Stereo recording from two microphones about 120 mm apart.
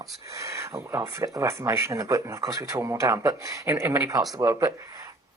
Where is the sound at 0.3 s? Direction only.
25° right (ahead or behind).